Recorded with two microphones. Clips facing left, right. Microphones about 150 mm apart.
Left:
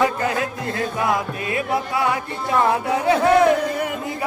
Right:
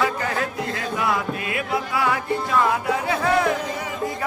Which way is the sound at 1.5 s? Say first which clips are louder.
Left 3 dB; 30° left (ahead or behind).